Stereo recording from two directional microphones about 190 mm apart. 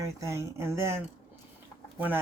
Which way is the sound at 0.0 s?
15° right (ahead or behind).